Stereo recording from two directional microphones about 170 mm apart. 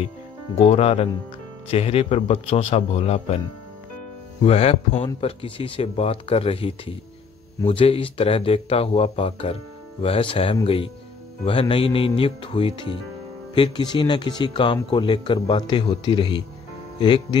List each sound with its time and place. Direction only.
0.6 s speech: 35° left (ahead or behind)
4.4 s speech: 35° left (ahead or behind)